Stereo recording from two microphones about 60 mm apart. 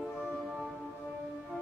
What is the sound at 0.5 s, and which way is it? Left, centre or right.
Music, centre.